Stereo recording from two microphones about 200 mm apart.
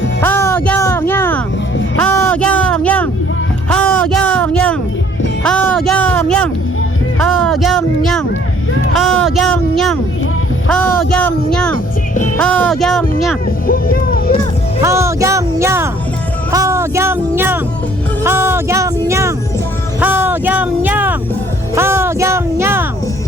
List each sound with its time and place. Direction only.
0.2 s music: 10° left (ahead or behind)
2.0 s a sound: 10° left (ahead or behind)
10.7 s speech: 5° left (ahead or behind)
13.7 s music: 45° left (ahead or behind)
14.8 s music: 15° right (ahead or behind)
20.0 s a sound: 10° right (ahead or behind)